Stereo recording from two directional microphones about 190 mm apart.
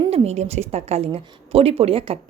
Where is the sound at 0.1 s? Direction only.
35° right (ahead or behind).